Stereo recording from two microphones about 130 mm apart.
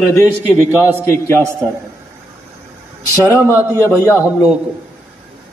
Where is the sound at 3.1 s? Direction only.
20° left (ahead or behind).